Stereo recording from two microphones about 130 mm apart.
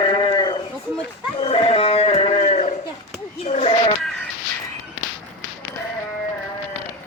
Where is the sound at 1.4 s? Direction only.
45° left (ahead or behind).